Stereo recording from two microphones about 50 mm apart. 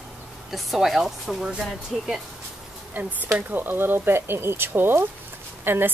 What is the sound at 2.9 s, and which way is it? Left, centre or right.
Speech, right.